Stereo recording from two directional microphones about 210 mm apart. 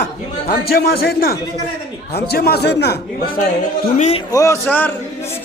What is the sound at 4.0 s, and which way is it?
Speech, 30° left (ahead or behind).